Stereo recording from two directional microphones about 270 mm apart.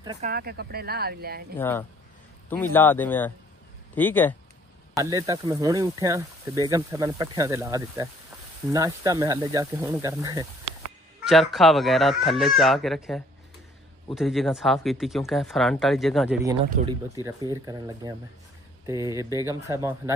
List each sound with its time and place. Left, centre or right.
0.0 s speech: centre
0.3 s speech: right
1.6 s speech: centre
4.9 s speech: centre
11.2 s speech: centre
17.2 s speech: centre